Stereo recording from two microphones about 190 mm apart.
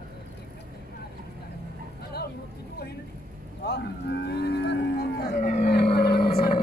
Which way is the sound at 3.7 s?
65° left (ahead or behind).